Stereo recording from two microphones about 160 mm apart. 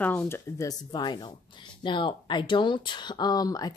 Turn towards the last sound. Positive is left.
turn(degrees=25)  # may be behind; listen again after turning